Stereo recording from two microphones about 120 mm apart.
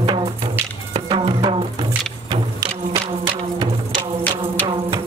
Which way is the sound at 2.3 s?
35° right (ahead or behind).